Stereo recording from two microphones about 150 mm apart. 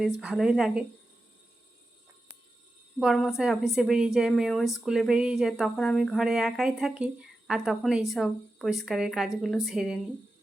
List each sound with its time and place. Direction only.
0.2 s speech: 5° right (ahead or behind)
3.0 s speech: centre (ahead or behind)